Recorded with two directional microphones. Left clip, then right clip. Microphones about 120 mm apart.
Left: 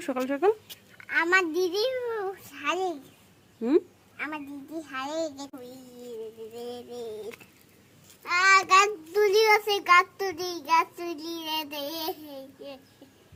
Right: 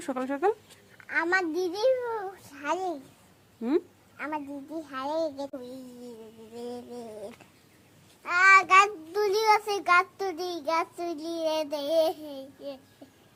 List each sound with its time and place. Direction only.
0.0 s speech: 20° left (ahead or behind)
1.1 s a child's voice: 30° right (ahead or behind)
3.6 s speech: 20° left (ahead or behind)
4.2 s a child's voice: 35° right (ahead or behind)
6.6 s a sound: 45° right (ahead or behind)
8.2 s child singing: 50° right (ahead or behind)